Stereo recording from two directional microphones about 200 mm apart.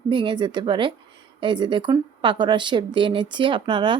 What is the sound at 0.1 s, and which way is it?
Speech, 25° right (ahead or behind).